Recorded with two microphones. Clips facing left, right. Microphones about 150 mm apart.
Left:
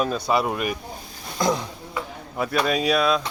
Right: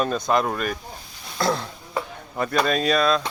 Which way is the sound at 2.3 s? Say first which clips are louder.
Right 1 dB; 5° left (ahead or behind).